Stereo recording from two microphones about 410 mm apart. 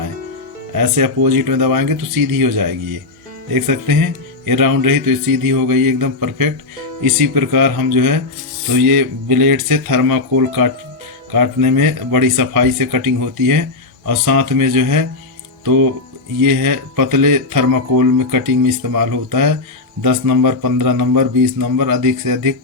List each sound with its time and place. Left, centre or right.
0.8 s speech: right
16.5 s speech: right